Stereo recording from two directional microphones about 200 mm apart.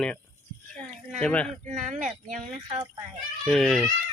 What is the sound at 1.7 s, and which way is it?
Speech, 35° right (ahead or behind).